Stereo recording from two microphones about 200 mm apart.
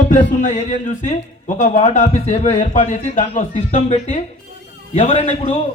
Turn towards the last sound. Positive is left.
turn(degrees=35)  # may be behind; listen again after turning